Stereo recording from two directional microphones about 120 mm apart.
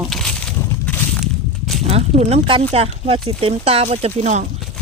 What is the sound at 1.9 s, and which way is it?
Speech, 60° right (ahead or behind).